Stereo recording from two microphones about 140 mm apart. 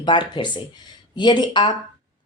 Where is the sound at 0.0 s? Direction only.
35° left (ahead or behind).